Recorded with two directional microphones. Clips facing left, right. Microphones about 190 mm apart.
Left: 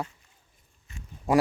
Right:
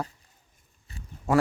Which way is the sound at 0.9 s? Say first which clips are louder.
Right 1 dB; 35° right (ahead or behind).